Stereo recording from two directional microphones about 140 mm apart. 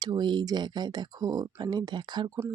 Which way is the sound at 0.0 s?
30° right (ahead or behind).